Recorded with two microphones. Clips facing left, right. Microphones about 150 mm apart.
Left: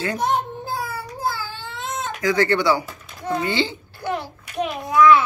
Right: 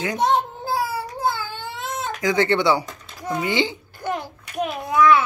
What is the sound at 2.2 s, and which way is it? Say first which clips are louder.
Speech: even; 20° right (ahead or behind).